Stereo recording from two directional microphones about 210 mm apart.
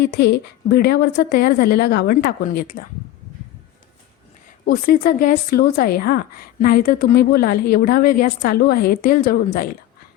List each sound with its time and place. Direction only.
0.0 s speech: 50° left (ahead or behind)
4.6 s speech: 45° left (ahead or behind)